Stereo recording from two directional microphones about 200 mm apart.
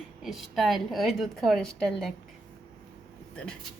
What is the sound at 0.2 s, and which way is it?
A woman's voice, centre (ahead or behind).